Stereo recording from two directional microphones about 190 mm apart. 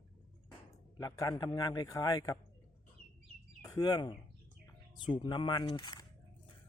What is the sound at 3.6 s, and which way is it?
A man's voice, 20° left (ahead or behind).